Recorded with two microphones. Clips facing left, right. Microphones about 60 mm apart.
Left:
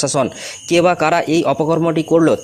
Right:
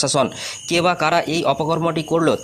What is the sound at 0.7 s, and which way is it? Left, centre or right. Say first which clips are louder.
Speech: left 4 dB; left.